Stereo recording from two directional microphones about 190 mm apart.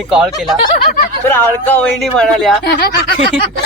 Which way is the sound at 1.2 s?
10° left (ahead or behind).